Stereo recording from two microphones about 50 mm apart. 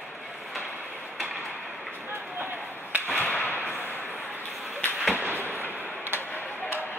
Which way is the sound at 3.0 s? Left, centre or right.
Left.